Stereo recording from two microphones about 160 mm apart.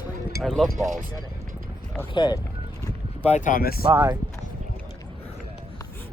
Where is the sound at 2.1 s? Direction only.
25° left (ahead or behind).